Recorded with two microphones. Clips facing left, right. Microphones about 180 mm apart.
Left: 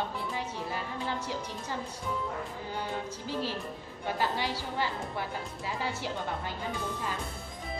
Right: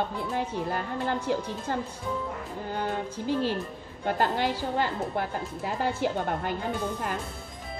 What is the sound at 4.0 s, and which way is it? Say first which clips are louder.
A woman's voice: right 5 dB; 50° right (ahead or behind).